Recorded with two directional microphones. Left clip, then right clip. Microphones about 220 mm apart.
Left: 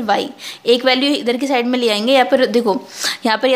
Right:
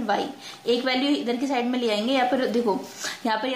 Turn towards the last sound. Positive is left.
turn(degrees=45)  # may be behind; listen again after turning